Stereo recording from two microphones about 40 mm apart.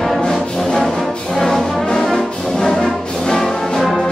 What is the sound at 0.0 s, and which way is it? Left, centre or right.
Music, centre.